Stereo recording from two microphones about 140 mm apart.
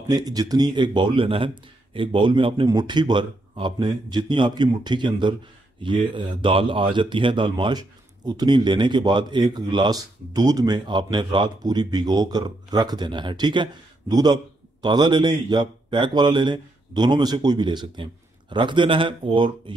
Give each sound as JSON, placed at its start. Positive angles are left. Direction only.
{"t": 0.1, "sound": "speech", "side_deg": -30}